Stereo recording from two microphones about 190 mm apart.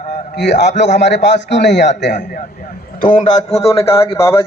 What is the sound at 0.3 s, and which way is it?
A man's voice, 65° left (ahead or behind).